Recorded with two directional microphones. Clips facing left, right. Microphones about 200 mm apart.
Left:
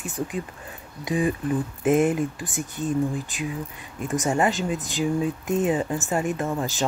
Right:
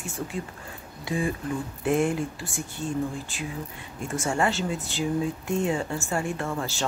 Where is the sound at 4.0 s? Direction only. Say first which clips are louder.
Left 3 dB; 20° left (ahead or behind).